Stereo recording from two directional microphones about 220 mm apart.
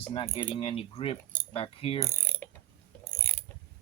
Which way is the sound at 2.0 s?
10° left (ahead or behind).